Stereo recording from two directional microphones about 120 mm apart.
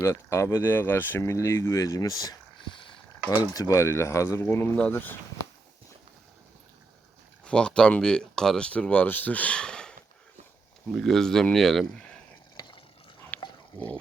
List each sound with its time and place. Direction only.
0.0 s speech: 25° left (ahead or behind)
2.6 s a sound: 45° left (ahead or behind)
3.3 s speech: 30° left (ahead or behind)
7.4 s speech: 10° left (ahead or behind)
10.9 s speech: centre (ahead or behind)
12.5 s a sound: 40° left (ahead or behind)
13.3 s dog: 15° left (ahead or behind)
13.7 s speech: 10° left (ahead or behind)